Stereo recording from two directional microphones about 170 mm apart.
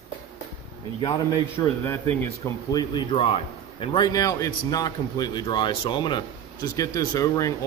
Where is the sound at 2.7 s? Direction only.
30° left (ahead or behind).